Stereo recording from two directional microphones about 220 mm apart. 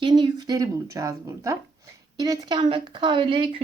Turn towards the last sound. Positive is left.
turn(degrees=-25)  # may be behind; listen again after turning